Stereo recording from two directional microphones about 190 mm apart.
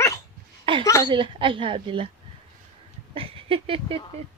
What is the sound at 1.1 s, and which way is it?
A woman's voice, 25° right (ahead or behind).